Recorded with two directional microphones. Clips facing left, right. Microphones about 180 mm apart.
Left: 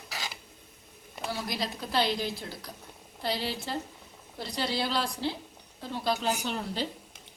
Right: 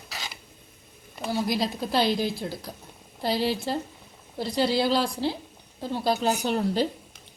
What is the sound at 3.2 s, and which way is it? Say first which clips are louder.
A woman's voice: right 7 dB; 35° right (ahead or behind).